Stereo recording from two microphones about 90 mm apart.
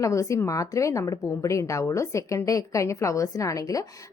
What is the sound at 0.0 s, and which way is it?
A woman's voice, 35° left (ahead or behind).